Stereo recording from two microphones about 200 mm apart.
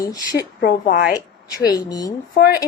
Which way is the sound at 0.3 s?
50° left (ahead or behind).